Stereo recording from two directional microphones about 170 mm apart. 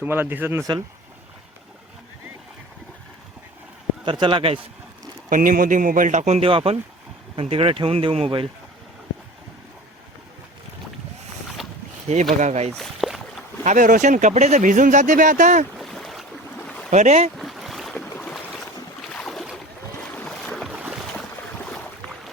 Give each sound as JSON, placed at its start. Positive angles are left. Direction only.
{"t": 0.0, "sound": "speech", "side_deg": -10}
{"t": 4.0, "sound": "speech", "side_deg": -30}
{"t": 5.3, "sound": "speech", "side_deg": -55}
{"t": 12.4, "sound": "speech", "side_deg": -40}
{"t": 12.7, "sound": "boat", "side_deg": 0}
{"t": 13.7, "sound": "speech", "side_deg": -50}
{"t": 15.8, "sound": "boat", "side_deg": 0}
{"t": 16.9, "sound": "speech", "side_deg": -40}
{"t": 17.3, "sound": "boat", "side_deg": 0}
{"t": 18.1, "sound": "boat", "side_deg": 10}